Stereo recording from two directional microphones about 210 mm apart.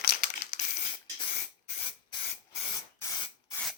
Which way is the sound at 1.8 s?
25° left (ahead or behind).